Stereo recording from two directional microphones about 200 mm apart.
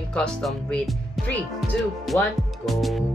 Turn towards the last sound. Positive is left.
turn(degrees=0)  # may be behind; listen again after turning